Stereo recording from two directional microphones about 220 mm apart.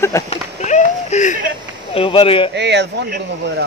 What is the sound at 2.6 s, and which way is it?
Speech, 50° right (ahead or behind).